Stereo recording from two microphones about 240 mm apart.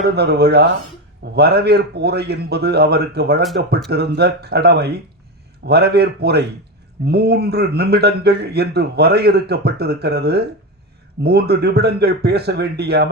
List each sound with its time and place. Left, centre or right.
0.1 s speech: right